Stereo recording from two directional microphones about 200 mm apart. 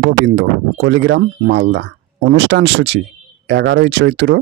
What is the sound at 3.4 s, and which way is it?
Speech, 60° right (ahead or behind).